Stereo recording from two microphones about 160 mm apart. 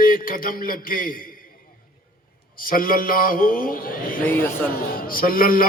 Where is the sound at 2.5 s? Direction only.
60° left (ahead or behind).